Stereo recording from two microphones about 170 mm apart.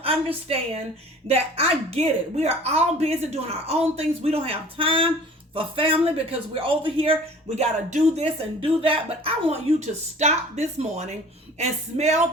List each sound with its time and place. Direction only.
0.0 s speech: 35° right (ahead or behind)